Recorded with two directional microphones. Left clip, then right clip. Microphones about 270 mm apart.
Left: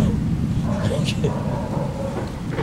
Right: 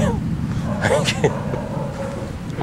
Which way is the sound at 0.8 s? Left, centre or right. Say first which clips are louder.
Right 9 dB; centre.